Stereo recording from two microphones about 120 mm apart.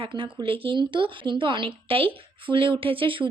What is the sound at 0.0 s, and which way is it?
Speech, 45° right (ahead or behind).